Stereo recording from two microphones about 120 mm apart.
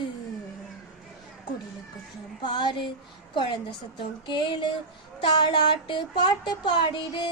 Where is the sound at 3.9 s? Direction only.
40° left (ahead or behind).